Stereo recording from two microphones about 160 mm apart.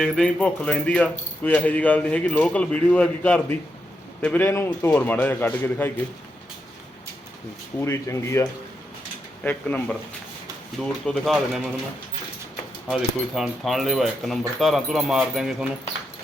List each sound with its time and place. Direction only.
0.0 s speech: 5° left (ahead or behind)
7.8 s speech: 15° left (ahead or behind); by 11.7 s centre (ahead or behind)
12.9 s speech: centre (ahead or behind)